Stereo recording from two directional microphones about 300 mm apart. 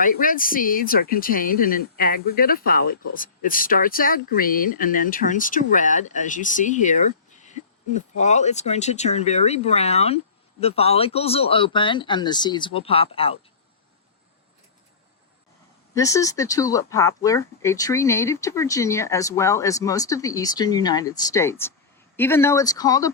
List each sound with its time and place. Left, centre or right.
0.0 s speech: left
16.0 s speech: centre